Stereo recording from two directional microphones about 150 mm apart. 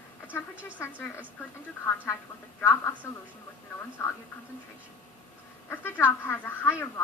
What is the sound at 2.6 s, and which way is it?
Speech, 10° left (ahead or behind).